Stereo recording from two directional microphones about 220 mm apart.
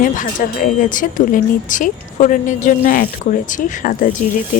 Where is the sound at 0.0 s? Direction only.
35° left (ahead or behind).